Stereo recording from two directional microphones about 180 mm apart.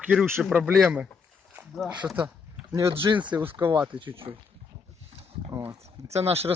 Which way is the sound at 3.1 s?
25° right (ahead or behind).